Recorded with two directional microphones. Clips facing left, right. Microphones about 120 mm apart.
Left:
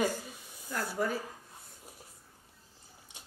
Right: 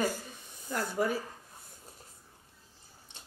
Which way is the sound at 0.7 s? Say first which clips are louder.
Right 2 dB; 15° right (ahead or behind).